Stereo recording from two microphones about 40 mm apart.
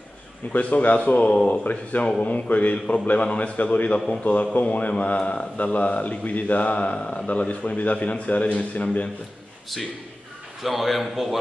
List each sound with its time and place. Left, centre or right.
0.5 s a man's voice: left
10.6 s a man's voice: centre